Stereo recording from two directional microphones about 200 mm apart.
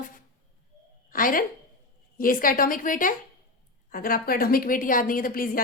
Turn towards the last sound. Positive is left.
turn(degrees=45)  # may be behind; listen again after turning